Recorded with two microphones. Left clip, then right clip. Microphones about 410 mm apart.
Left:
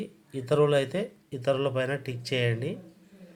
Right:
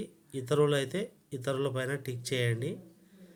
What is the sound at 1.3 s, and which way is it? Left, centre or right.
Speech, right.